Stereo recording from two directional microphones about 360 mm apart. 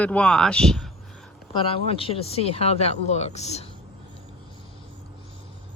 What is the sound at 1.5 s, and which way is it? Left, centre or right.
Speech, centre.